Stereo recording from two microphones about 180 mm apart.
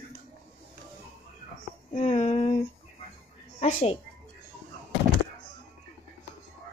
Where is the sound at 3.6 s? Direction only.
35° left (ahead or behind).